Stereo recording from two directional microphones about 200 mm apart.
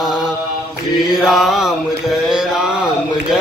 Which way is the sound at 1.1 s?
Centre (ahead or behind).